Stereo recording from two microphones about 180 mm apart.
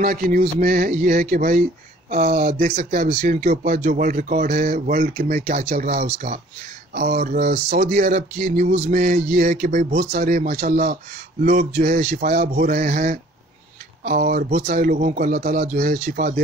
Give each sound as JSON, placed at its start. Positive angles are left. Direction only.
{"t": 0.0, "sound": "speech", "side_deg": -55}
{"t": 2.0, "sound": "speech", "side_deg": -40}
{"t": 3.3, "sound": "speech", "side_deg": -50}
{"t": 10.1, "sound": "speech", "side_deg": -50}
{"t": 10.6, "sound": "speech", "side_deg": -40}